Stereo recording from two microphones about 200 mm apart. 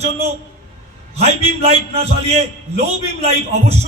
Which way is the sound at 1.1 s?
30° right (ahead or behind).